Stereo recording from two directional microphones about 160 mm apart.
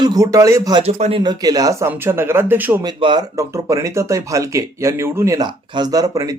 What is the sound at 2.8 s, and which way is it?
Speech, 30° right (ahead or behind).